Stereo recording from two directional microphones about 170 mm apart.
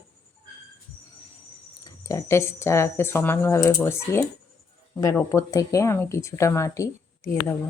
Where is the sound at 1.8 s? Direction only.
20° left (ahead or behind).